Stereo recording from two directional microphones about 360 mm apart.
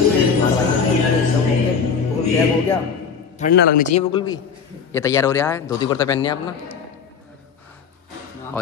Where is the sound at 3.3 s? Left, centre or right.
Left.